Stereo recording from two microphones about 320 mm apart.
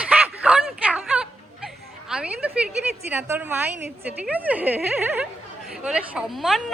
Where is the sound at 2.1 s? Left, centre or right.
Centre.